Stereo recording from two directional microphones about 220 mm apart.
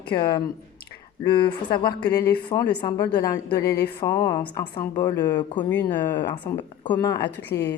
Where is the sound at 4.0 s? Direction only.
15° left (ahead or behind).